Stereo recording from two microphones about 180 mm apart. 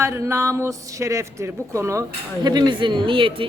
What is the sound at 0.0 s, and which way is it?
A man's voice, 15° right (ahead or behind).